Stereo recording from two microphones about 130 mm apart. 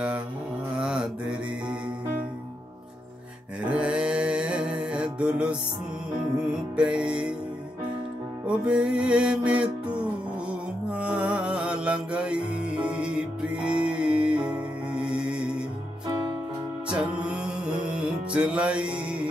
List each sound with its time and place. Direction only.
0.7 s mantra: 5° right (ahead or behind)
3.6 s music: 10° right (ahead or behind)
8.5 s music: 5° right (ahead or behind)
10.9 s music: 10° right (ahead or behind)
16.1 s music: 40° right (ahead or behind)
16.9 s music: 10° right (ahead or behind)